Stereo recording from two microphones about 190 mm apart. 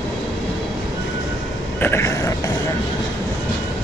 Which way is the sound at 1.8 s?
15° left (ahead or behind).